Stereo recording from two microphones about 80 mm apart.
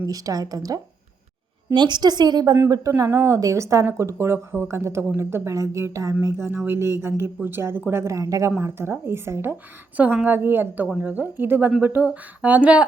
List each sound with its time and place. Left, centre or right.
0.1 s speech: right
1.7 s a woman's voice: right
2.6 s speech: right
2.9 s a woman's voice: right
8.6 s a woman's voice: right